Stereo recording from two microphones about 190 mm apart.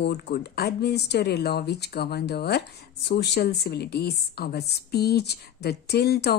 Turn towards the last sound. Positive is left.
turn(degrees=55)  # may be behind; listen again after turning